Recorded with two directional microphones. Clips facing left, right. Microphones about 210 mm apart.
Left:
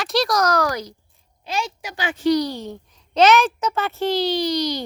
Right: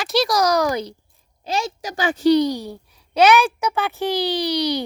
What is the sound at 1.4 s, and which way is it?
Speech, 40° right (ahead or behind).